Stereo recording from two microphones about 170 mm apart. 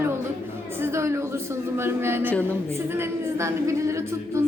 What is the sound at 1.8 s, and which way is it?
Speech, 15° right (ahead or behind).